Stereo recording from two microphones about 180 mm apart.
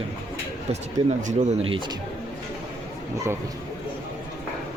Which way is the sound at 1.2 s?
45° right (ahead or behind).